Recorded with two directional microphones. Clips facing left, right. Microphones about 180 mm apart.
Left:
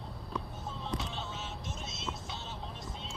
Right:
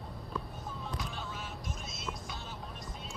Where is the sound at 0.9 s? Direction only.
25° left (ahead or behind).